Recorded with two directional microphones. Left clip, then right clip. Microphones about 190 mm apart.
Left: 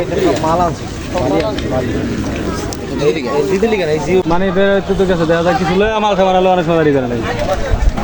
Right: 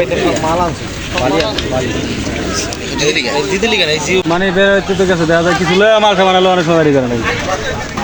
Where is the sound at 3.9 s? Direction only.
35° left (ahead or behind).